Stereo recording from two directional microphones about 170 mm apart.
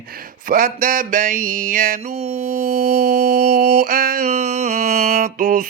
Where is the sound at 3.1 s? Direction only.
60° right (ahead or behind).